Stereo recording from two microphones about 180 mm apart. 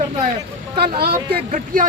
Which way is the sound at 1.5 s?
45° right (ahead or behind).